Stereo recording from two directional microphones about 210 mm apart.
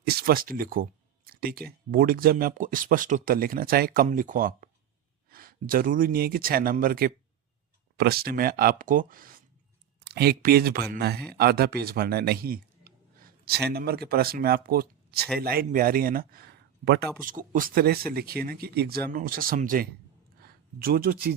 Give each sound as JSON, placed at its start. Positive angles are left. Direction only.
{"t": 0.1, "sound": "a sound", "side_deg": -45}
{"t": 1.6, "sound": "speech", "side_deg": -45}
{"t": 17.2, "sound": "speech", "side_deg": -40}